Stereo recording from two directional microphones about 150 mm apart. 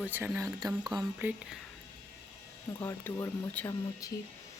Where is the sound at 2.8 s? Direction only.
15° left (ahead or behind).